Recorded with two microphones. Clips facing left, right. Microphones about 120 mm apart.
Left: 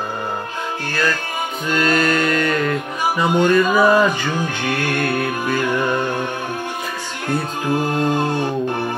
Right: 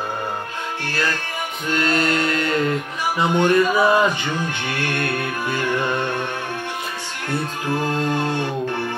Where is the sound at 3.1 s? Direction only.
20° right (ahead or behind).